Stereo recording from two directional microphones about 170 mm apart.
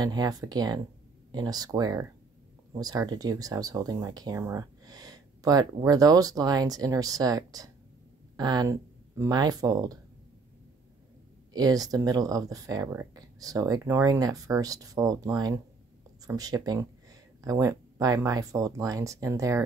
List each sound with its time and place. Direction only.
0.0 s speech: 25° right (ahead or behind)
11.5 s speech: 20° right (ahead or behind)